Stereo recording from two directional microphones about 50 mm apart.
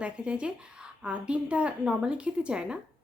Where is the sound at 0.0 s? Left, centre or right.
Right.